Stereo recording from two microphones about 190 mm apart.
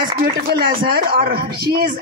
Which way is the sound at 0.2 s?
55° right (ahead or behind).